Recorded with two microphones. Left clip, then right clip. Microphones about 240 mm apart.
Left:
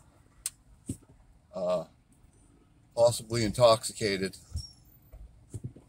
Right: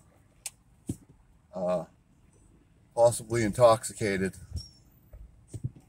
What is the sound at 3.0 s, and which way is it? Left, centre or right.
Speech, centre.